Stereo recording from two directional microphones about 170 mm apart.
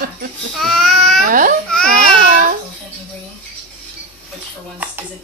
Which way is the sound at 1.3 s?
55° right (ahead or behind).